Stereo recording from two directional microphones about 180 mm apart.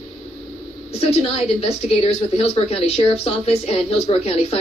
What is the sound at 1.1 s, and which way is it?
A woman's voice, 35° left (ahead or behind).